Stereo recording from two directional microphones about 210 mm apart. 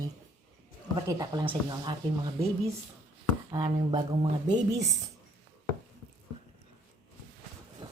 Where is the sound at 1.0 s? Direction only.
15° right (ahead or behind).